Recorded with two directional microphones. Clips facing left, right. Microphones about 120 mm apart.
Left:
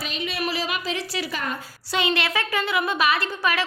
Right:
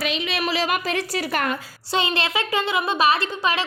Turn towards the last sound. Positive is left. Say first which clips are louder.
# right 2 dB
turn(degrees=-25)  # may be behind; listen again after turning